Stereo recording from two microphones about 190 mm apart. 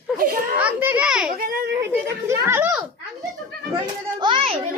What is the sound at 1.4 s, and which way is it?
Children playing, 55° right (ahead or behind).